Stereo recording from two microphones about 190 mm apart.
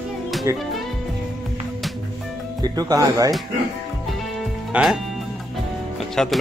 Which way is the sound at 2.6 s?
20° right (ahead or behind).